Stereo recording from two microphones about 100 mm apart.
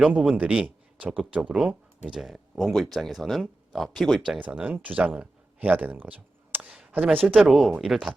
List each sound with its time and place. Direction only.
0.0 s speech: 10° right (ahead or behind)
4.4 s speech: 15° right (ahead or behind)
7.4 s speech: 5° right (ahead or behind)